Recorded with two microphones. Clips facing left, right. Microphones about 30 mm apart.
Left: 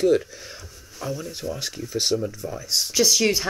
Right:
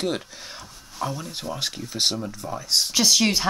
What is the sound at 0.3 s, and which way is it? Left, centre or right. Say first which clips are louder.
Speech: right 1 dB; right.